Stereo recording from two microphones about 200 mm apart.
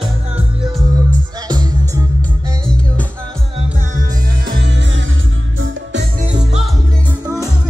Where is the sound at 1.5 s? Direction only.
20° right (ahead or behind).